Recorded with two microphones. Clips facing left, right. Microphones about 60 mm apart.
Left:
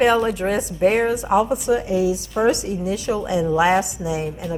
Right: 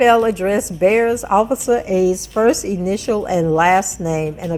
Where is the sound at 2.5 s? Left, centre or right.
Right.